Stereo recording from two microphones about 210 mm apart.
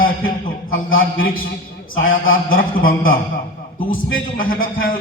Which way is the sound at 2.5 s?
40° left (ahead or behind).